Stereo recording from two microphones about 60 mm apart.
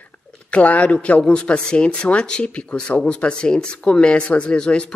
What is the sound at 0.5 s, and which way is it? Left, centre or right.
A man's voice, left.